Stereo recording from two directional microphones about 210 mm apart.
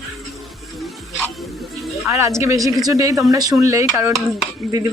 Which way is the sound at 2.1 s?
15° right (ahead or behind).